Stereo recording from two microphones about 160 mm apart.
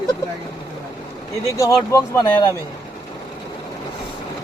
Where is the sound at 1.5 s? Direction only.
20° left (ahead or behind).